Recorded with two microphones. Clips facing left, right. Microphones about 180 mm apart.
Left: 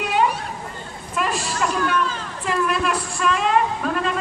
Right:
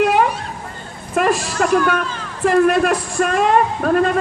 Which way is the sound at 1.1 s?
45° right (ahead or behind).